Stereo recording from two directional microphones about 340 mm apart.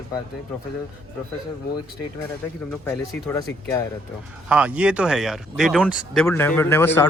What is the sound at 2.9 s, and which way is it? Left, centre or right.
Speech, centre.